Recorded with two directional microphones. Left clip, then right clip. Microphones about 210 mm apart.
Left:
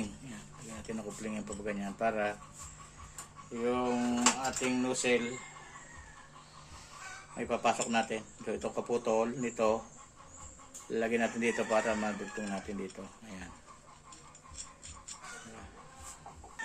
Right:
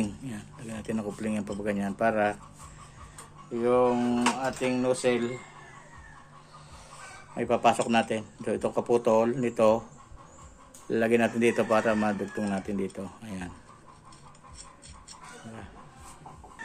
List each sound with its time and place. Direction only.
0.3 s speech: 50° right (ahead or behind)
3.5 s speech: 40° right (ahead or behind)
7.3 s speech: 45° right (ahead or behind)
10.9 s speech: 50° right (ahead or behind)